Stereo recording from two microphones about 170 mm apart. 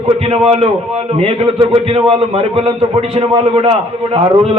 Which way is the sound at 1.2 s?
35° right (ahead or behind).